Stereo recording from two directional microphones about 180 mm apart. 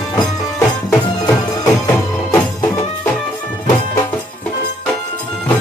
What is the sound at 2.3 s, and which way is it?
Music, 15° left (ahead or behind).